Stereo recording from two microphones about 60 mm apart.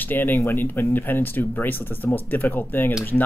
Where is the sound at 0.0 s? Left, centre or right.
Left.